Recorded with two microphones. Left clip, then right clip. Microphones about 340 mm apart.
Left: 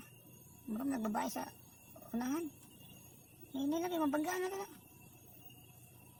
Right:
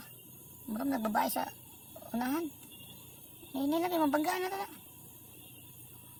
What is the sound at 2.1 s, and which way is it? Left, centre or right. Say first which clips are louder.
Speech: right 5 dB; left.